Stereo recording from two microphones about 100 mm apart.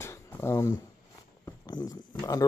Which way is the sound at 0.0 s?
25° left (ahead or behind).